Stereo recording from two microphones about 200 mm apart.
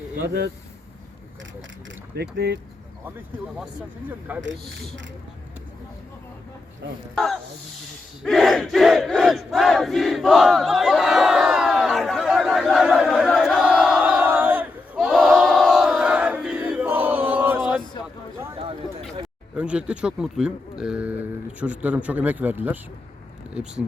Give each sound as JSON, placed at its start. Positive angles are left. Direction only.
{"t": 2.1, "sound": "speech", "side_deg": -55}
{"t": 4.3, "sound": "a man's voice", "side_deg": -5}
{"t": 8.2, "sound": "crowd", "side_deg": 0}
{"t": 19.5, "sound": "a man's voice", "side_deg": -5}